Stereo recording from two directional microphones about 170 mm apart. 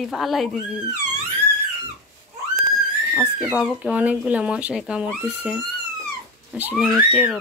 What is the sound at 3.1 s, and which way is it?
Speech, 5° right (ahead or behind).